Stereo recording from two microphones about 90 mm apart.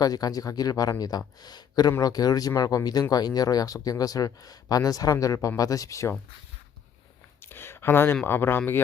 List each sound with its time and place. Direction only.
0.0 s speech: 45° left (ahead or behind)
7.4 s speech: 25° left (ahead or behind)